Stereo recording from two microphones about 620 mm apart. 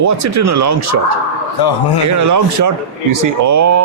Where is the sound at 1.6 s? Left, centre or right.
Left.